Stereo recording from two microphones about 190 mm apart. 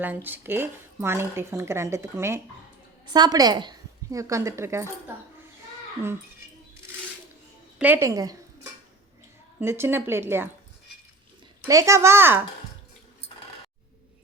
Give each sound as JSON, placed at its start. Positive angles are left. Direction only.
{"t": 0.0, "sound": "speech", "side_deg": -10}
{"t": 7.8, "sound": "speech", "side_deg": -10}
{"t": 9.6, "sound": "speech", "side_deg": -10}
{"t": 11.6, "sound": "speech", "side_deg": -15}